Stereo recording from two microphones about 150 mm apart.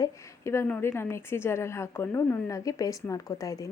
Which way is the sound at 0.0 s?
20° left (ahead or behind).